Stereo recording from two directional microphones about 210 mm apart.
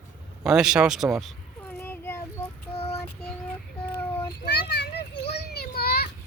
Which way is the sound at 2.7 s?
30° left (ahead or behind).